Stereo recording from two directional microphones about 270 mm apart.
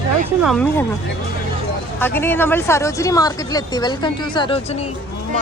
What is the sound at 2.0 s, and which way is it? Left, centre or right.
Speech, centre.